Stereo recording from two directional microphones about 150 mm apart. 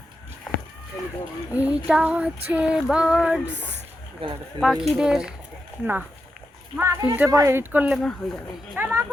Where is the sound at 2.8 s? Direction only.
5° right (ahead or behind).